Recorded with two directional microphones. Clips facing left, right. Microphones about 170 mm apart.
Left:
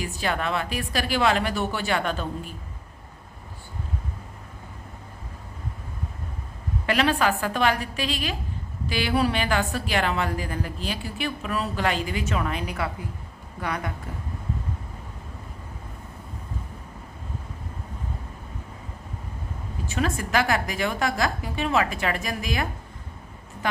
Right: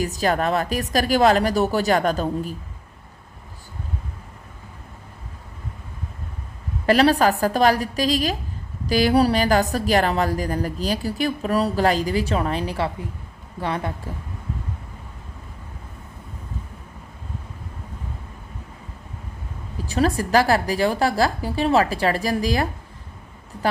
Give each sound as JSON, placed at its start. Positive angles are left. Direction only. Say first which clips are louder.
{"t": 0.0, "sound": "a woman's voice", "louder": "right 6 dB", "side_deg": -40}
{"t": 6.8, "sound": "a woman's voice", "louder": "right 6 dB", "side_deg": -35}
{"t": 19.9, "sound": "a woman's voice", "louder": "right 6 dB", "side_deg": -35}